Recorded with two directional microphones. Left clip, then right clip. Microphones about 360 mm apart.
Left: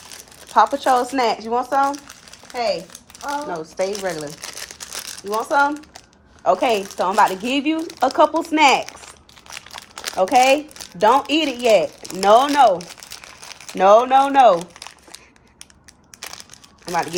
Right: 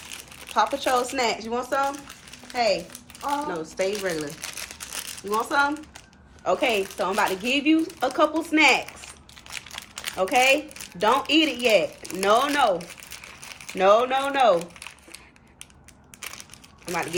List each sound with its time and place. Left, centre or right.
0.5 s speech: left
3.2 s speech: centre
12.8 s crumpling: centre
16.8 s speech: left